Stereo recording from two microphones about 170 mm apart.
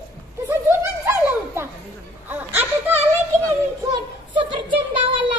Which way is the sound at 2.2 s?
15° right (ahead or behind).